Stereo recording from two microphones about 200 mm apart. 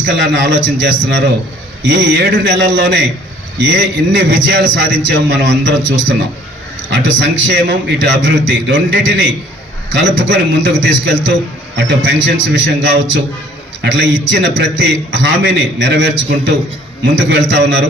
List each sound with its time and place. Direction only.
0.2 s a man's voice: 65° right (ahead or behind)